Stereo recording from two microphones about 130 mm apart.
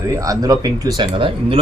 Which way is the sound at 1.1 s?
45° right (ahead or behind).